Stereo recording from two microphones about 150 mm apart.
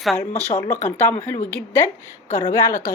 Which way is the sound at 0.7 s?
20° left (ahead or behind).